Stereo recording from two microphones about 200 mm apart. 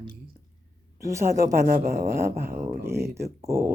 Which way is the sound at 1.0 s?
15° right (ahead or behind).